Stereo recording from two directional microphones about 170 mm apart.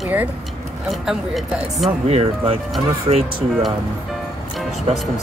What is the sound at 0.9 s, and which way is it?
Speech, centre (ahead or behind).